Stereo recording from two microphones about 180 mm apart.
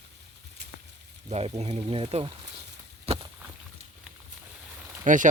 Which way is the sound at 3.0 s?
30° right (ahead or behind).